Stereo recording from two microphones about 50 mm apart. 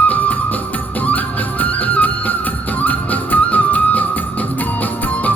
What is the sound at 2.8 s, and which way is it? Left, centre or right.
Music, left.